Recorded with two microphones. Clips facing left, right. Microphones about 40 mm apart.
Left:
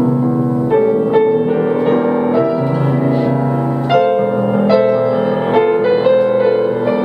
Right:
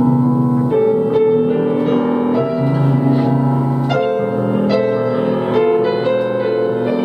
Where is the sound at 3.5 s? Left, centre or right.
Left.